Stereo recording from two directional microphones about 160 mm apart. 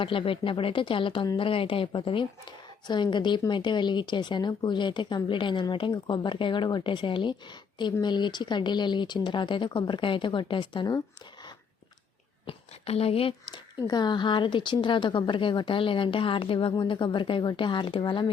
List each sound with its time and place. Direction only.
0.0 s speech: 35° left (ahead or behind)
12.5 s a woman's voice: 40° left (ahead or behind)